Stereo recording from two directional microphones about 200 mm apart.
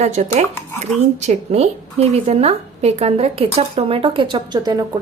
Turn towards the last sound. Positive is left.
turn(degrees=-20)  # may be behind; listen again after turning